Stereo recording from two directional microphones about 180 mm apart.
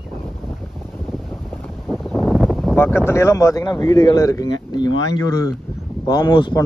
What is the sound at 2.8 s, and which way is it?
A man's voice, 15° left (ahead or behind).